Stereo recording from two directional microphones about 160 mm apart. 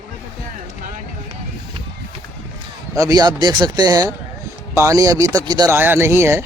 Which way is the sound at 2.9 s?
20° right (ahead or behind).